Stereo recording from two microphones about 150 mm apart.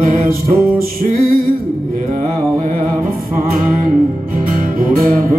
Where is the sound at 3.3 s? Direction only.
70° right (ahead or behind).